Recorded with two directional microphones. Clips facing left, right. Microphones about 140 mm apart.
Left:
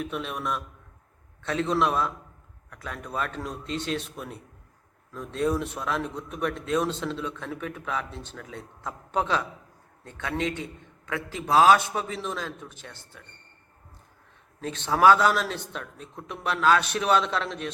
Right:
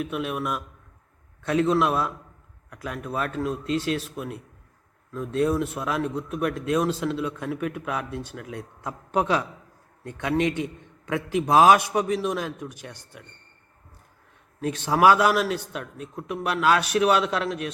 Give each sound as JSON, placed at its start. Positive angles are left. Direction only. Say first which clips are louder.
{"t": 0.0, "sound": "a man's voice", "louder": "right 3 dB", "side_deg": -5}
{"t": 14.6, "sound": "a man's voice", "louder": "right 1 dB", "side_deg": -10}